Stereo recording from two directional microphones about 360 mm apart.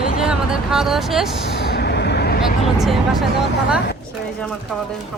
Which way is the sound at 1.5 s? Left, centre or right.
Left.